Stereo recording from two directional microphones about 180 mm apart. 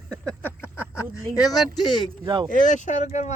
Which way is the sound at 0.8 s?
20° left (ahead or behind).